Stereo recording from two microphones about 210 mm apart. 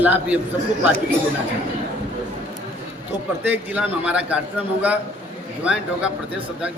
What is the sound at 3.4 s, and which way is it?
Speech, 5° right (ahead or behind).